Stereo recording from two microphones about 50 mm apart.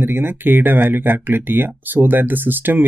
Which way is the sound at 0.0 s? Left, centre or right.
Right.